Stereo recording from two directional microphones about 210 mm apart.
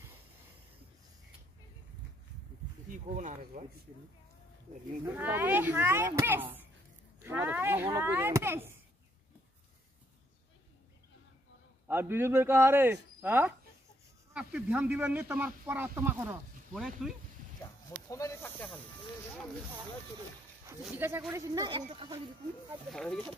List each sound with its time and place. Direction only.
2.9 s speech: 35° right (ahead or behind)
5.0 s speech: 10° right (ahead or behind)
11.9 s speech: 10° right (ahead or behind)
18.0 s speech: 15° left (ahead or behind)
20.8 s speech: 10° right (ahead or behind); by 22.2 s 25° right (ahead or behind)
22.7 s speech: centre (ahead or behind)